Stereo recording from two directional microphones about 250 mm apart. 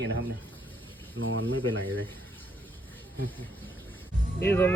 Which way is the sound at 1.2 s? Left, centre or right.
Right.